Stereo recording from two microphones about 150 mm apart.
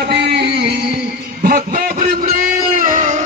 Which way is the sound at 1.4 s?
70° right (ahead or behind).